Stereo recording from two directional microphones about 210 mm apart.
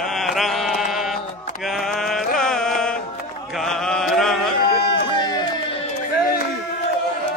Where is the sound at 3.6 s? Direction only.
Centre (ahead or behind).